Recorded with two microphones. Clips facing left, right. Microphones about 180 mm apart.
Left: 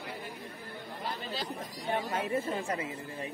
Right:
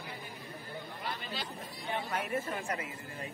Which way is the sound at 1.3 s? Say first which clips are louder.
Left 4 dB; 40° left (ahead or behind).